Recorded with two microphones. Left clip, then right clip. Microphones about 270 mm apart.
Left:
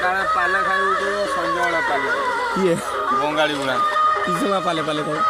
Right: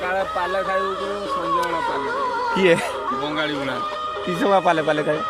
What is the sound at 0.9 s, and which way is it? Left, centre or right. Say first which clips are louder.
Speech: left 4 dB; left.